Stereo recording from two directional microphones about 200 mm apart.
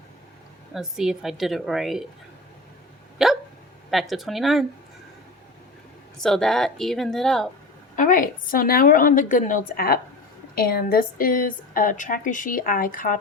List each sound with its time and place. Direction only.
0.7 s a woman's voice: centre (ahead or behind)
3.2 s hiccup: centre (ahead or behind)
3.9 s a woman's voice: centre (ahead or behind)
6.2 s a woman's voice: centre (ahead or behind)
7.9 s a woman's voice: 40° left (ahead or behind)